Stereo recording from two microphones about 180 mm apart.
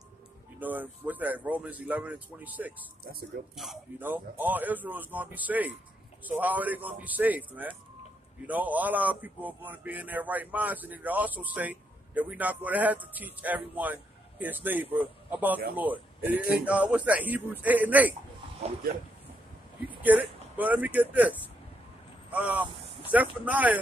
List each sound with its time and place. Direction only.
0.6 s speech: 10° right (ahead or behind)
3.0 s speech: 60° right (ahead or behind)
3.5 s a man's voice: centre (ahead or behind)
20.0 s speech: 10° right (ahead or behind)